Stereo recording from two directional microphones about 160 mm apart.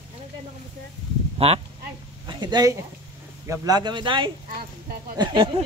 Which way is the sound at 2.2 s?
25° right (ahead or behind).